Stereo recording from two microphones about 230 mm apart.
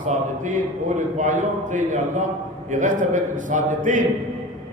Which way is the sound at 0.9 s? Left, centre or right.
Right.